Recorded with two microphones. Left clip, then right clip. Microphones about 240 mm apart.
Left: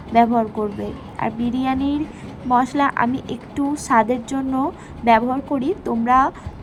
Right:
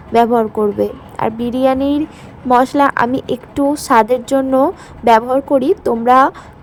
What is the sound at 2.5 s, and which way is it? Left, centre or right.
Speech, right.